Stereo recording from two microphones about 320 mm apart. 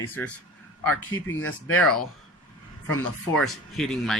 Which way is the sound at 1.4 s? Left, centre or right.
Left.